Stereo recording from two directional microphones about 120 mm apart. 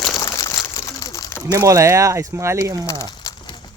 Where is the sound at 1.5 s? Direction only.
25° right (ahead or behind).